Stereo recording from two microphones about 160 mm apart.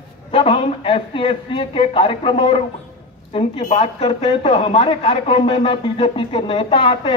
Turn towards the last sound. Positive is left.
turn(degrees=35)  # may be behind; listen again after turning